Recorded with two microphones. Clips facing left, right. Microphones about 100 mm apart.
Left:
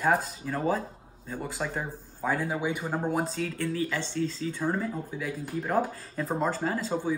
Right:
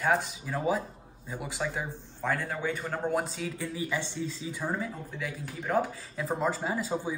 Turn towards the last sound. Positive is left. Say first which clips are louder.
# left 2 dB
turn(degrees=-10)  # may be behind; listen again after turning